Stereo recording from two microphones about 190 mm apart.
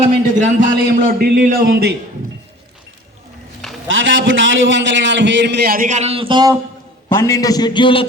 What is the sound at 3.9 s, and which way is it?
A man's voice, 85° right.